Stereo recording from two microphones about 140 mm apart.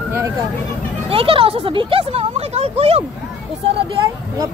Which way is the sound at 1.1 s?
40° right (ahead or behind).